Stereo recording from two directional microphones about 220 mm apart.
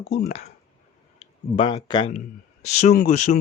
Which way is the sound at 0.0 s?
45° left (ahead or behind).